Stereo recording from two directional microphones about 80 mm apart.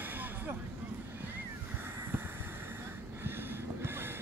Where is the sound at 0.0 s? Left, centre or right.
Right.